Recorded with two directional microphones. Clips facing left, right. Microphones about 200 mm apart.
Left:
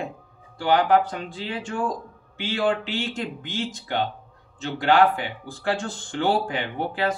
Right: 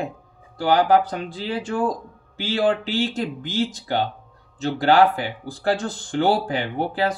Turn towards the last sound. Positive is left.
turn(degrees=-35)  # may be behind; listen again after turning